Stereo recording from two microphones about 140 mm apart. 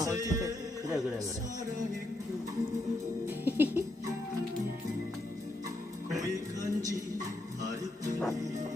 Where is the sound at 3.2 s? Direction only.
15° right (ahead or behind).